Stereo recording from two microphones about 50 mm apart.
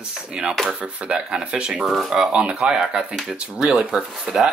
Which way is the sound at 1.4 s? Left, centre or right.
Centre.